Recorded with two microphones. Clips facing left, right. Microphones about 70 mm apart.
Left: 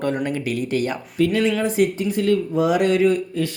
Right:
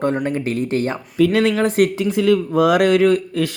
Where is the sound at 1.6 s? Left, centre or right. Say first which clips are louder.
Right 3 dB; right.